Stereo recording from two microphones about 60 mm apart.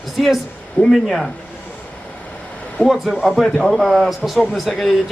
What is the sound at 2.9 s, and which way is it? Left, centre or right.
A man's voice, centre.